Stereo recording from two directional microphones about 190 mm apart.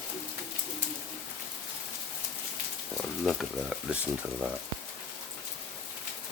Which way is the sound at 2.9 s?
Centre (ahead or behind).